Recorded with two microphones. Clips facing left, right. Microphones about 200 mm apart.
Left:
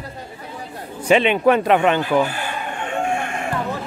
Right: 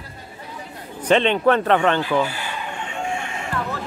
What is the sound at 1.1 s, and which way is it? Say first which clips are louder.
Speech: left 2 dB; 10° left (ahead or behind).